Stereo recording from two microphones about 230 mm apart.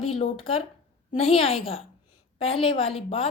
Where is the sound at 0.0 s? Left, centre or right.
Left.